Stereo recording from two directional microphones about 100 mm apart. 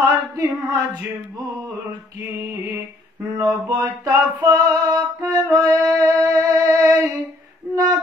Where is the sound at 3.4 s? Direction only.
40° right (ahead or behind).